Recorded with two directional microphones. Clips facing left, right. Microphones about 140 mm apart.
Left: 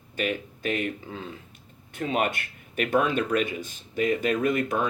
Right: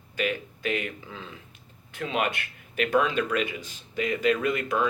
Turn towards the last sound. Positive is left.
turn(degrees=45)  # may be behind; listen again after turning